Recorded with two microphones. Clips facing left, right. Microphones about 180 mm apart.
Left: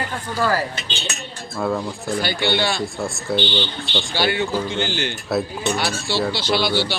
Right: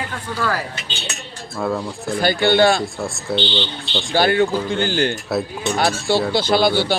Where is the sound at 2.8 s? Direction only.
Centre (ahead or behind).